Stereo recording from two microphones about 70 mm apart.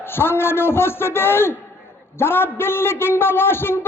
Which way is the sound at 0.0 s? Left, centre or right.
Left.